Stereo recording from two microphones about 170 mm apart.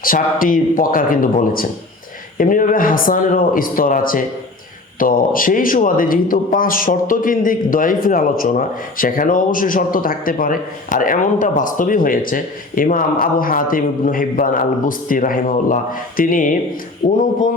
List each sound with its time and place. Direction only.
0.0 s a man's voice: 55° left (ahead or behind)